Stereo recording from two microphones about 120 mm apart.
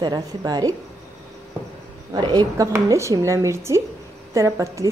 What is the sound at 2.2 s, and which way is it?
Speech, 30° right (ahead or behind).